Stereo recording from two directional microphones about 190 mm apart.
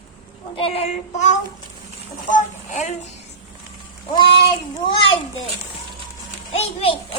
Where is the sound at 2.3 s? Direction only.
40° left (ahead or behind).